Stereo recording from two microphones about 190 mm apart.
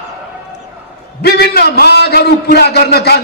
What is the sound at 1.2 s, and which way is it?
A man's voice, 55° left (ahead or behind).